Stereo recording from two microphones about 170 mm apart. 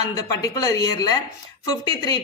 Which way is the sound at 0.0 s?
20° left (ahead or behind).